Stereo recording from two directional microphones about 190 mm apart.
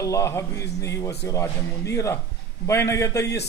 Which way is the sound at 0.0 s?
15° left (ahead or behind).